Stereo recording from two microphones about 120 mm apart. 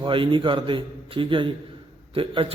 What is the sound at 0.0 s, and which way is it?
Speech, 45° right (ahead or behind).